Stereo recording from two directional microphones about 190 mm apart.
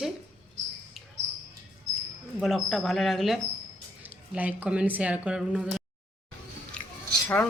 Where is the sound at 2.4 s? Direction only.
Centre (ahead or behind).